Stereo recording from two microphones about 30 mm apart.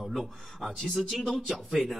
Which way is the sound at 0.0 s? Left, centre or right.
Centre.